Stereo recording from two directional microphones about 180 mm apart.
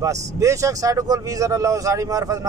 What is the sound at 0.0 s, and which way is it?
Speech, 20° right (ahead or behind).